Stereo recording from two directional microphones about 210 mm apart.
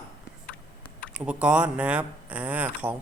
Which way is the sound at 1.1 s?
5° right (ahead or behind).